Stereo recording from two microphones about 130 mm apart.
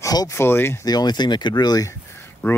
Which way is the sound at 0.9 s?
30° left (ahead or behind).